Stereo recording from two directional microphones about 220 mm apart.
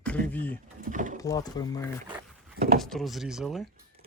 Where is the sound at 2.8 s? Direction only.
Centre (ahead or behind).